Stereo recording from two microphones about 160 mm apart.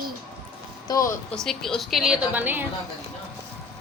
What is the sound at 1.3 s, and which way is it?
A woman's voice, 5° left (ahead or behind).